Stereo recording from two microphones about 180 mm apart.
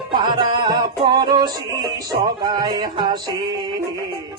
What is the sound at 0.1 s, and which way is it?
Music, 25° right (ahead or behind).